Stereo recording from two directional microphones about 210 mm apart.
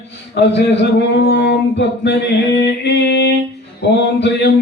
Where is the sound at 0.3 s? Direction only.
55° left (ahead or behind).